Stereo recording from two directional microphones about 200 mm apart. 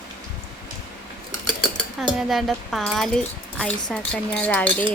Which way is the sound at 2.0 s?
Centre (ahead or behind).